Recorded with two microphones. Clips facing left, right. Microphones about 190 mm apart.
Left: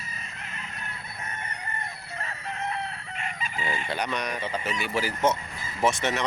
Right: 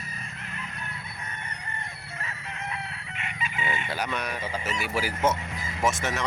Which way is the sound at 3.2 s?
35° left (ahead or behind).